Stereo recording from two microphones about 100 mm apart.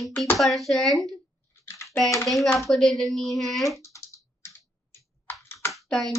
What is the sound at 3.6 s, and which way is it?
Computer keyboard, 30° left (ahead or behind).